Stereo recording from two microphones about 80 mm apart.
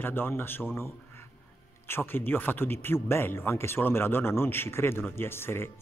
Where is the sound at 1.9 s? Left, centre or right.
Left.